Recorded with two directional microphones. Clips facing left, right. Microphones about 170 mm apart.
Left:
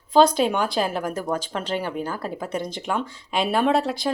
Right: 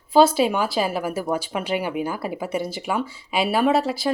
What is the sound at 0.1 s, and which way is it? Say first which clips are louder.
Speech: right 1 dB; 5° right (ahead or behind).